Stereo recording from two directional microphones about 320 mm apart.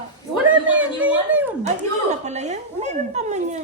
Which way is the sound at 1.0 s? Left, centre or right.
Centre.